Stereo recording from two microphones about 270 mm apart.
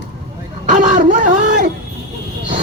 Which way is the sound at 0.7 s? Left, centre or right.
Right.